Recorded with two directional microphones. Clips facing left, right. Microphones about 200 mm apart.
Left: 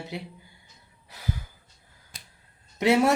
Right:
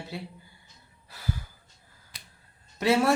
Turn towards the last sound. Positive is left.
turn(degrees=20)  # may be behind; listen again after turning